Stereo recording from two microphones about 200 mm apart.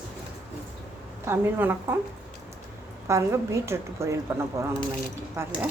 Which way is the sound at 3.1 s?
15° right (ahead or behind).